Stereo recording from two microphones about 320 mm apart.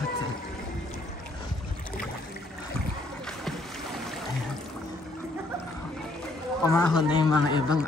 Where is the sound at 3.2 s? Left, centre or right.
Centre.